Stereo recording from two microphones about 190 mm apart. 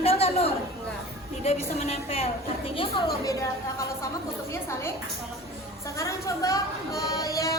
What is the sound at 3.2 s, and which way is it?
Speech, 15° left (ahead or behind).